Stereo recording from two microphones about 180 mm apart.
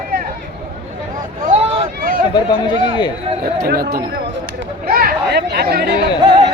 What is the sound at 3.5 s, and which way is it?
Speech, 55° right (ahead or behind).